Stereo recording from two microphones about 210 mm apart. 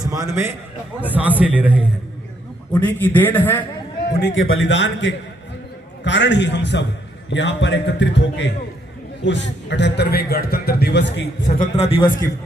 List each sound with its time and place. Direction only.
0.0 s a man's voice: 15° right (ahead or behind)
2.8 s a man's voice: 10° left (ahead or behind)
4.2 s a man's voice: 60° left (ahead or behind)
11.4 s a man's voice: 30° left (ahead or behind)